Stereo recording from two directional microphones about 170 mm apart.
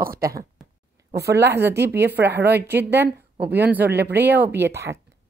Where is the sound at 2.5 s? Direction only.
10° right (ahead or behind).